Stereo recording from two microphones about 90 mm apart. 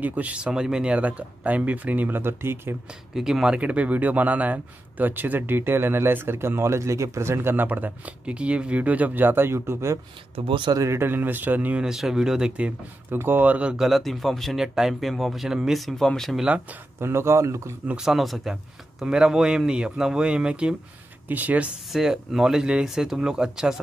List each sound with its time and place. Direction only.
0.0 s speech: 15° right (ahead or behind)
3.2 s a man's voice: 5° right (ahead or behind); by 9.9 s 30° right (ahead or behind)
10.3 s speech: 80° right
10.7 s a man's voice: 35° right (ahead or behind)
11.8 s speech: 5° right (ahead or behind)
13.1 s speech: 25° right (ahead or behind); by 16.4 s 5° left (ahead or behind)
17.0 s speech: 30° right (ahead or behind)
17.8 s speech: 5° right (ahead or behind)
21.9 s speech: 5° right (ahead or behind)